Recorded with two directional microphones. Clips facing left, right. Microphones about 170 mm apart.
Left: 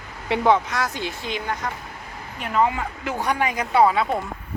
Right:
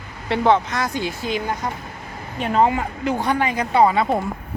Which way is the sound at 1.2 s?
40° right (ahead or behind).